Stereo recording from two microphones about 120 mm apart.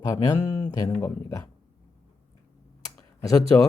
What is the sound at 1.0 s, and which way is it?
Speech, 20° left (ahead or behind).